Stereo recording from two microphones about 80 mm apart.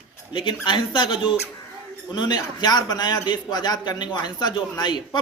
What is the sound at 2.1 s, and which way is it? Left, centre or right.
A man's voice, left.